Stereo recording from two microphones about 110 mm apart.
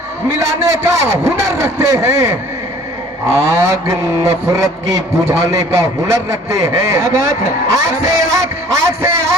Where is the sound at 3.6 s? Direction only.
25° right (ahead or behind).